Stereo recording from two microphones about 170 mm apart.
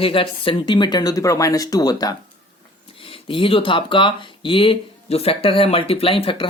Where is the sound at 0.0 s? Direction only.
30° left (ahead or behind).